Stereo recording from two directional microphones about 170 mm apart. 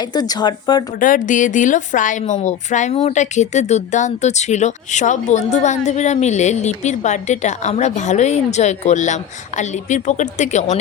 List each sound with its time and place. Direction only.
0.0 s speech: 25° left (ahead or behind)
0.9 s a woman's voice: 50° left (ahead or behind)